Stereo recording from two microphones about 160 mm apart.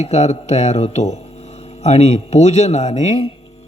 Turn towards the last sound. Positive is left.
turn(degrees=40)  # may be behind; listen again after turning